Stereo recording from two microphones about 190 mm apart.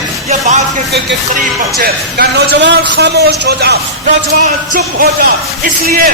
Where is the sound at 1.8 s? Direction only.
60° right (ahead or behind).